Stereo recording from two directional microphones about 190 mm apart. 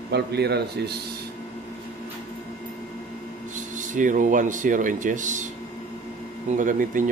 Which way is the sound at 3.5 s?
40° right (ahead or behind).